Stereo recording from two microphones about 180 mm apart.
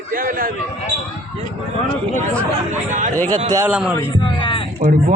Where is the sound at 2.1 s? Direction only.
10° left (ahead or behind).